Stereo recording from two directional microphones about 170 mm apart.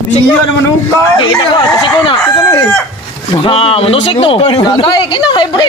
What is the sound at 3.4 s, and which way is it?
Speech, 35° left (ahead or behind).